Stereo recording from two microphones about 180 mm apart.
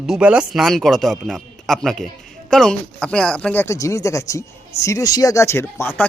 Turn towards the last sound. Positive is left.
turn(degrees=10)  # may be behind; listen again after turning